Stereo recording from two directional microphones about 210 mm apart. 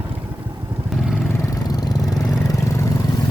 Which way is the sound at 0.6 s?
15° right (ahead or behind).